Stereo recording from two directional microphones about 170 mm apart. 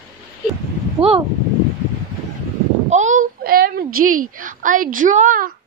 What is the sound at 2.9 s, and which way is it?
A woman's voice, 45° right (ahead or behind).